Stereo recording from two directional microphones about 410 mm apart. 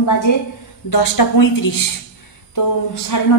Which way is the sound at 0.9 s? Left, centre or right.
Left.